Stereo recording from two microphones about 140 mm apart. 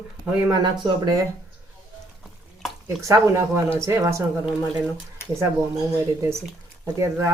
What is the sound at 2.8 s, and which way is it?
Speech, 20° right (ahead or behind).